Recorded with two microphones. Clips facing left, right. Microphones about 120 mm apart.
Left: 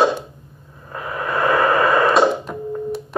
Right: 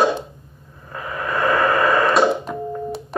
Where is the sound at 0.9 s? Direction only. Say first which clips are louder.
Left 1 dB; 10° left (ahead or behind).